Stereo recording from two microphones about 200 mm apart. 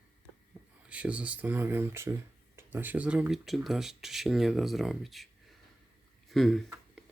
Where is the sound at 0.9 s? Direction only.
5° right (ahead or behind).